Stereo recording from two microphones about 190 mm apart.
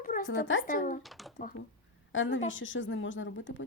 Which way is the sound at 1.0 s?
Centre (ahead or behind).